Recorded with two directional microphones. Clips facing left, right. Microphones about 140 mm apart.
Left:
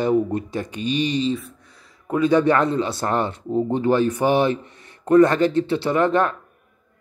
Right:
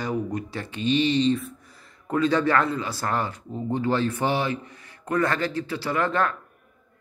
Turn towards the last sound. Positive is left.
turn(degrees=20)  # may be behind; listen again after turning